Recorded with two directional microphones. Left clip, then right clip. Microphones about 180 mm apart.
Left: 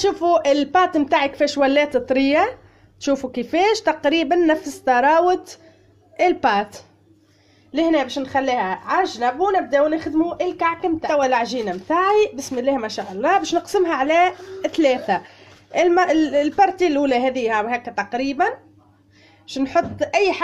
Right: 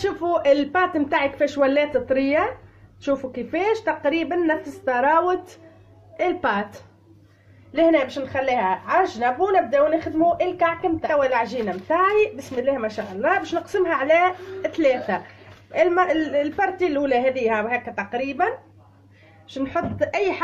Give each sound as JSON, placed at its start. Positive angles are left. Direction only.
{"t": 0.0, "sound": "speech", "side_deg": 35}
{"t": 19.5, "sound": "speech", "side_deg": 45}